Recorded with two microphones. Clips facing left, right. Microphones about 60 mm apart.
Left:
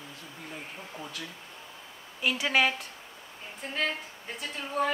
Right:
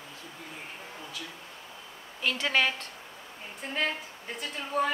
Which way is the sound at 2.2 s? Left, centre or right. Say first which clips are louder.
Left 1 dB; centre.